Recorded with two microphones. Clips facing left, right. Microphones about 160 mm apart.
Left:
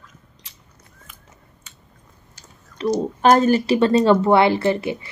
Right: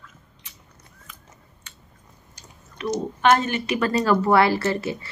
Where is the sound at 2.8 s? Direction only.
30° left (ahead or behind).